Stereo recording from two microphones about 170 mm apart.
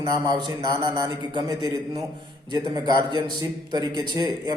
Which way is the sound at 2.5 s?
25° right (ahead or behind).